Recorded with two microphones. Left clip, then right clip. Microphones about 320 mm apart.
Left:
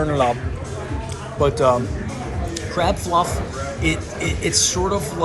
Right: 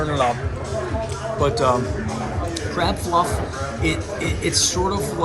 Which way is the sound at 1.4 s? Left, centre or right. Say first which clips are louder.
Left 2 dB; centre.